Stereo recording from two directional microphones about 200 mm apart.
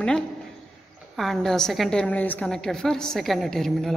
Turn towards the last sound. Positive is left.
turn(degrees=0)  # may be behind; listen again after turning